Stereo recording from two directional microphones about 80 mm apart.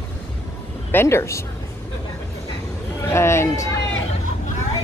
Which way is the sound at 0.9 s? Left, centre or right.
Left.